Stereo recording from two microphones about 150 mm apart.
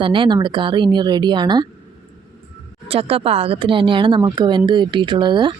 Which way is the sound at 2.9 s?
40° right (ahead or behind).